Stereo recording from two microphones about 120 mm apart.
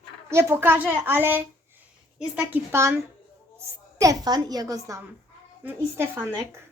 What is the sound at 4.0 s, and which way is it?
Speech, 30° right (ahead or behind).